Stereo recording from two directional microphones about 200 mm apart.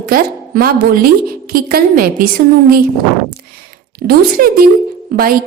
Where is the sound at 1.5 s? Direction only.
45° right (ahead or behind).